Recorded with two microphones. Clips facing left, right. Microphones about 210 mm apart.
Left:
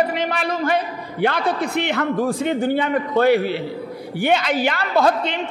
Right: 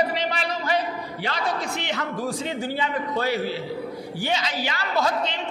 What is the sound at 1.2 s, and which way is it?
A woman's voice, 55° left (ahead or behind).